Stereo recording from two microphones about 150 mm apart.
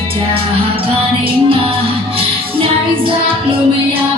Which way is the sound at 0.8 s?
35° right (ahead or behind).